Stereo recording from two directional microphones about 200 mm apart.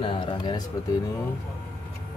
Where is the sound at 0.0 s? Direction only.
25° left (ahead or behind).